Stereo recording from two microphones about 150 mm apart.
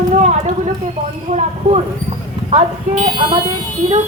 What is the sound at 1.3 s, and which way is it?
Speech, 50° right (ahead or behind).